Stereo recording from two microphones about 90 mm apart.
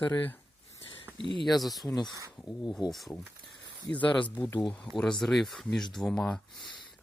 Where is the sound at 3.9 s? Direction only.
15° left (ahead or behind).